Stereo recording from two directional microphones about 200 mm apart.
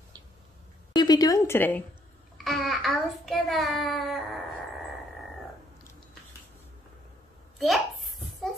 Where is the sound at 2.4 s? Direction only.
Centre (ahead or behind).